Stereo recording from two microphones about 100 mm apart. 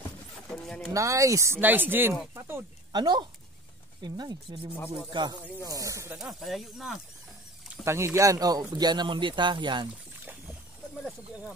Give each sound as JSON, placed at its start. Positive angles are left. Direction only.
{"t": 0.5, "sound": "pigeon", "side_deg": 5}
{"t": 0.9, "sound": "speech", "side_deg": -30}
{"t": 1.6, "sound": "speech", "side_deg": -20}
{"t": 2.9, "sound": "speech", "side_deg": -50}
{"t": 4.7, "sound": "music", "side_deg": 20}
{"t": 5.1, "sound": "speech", "side_deg": -45}
{"t": 5.7, "sound": "speech", "side_deg": -30}
{"t": 6.1, "sound": "speech", "side_deg": 0}
{"t": 7.8, "sound": "speech", "side_deg": -25}